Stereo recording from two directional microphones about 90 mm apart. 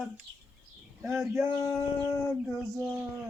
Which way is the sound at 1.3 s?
25° right (ahead or behind).